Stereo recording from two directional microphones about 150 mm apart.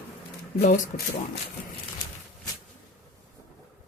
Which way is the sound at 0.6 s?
75° left (ahead or behind).